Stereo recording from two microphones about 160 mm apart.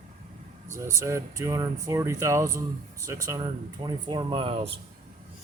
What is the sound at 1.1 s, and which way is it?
Speech, 20° right (ahead or behind).